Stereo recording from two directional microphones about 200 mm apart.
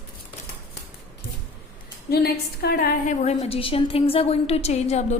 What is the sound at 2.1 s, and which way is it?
A woman's voice, 50° left (ahead or behind).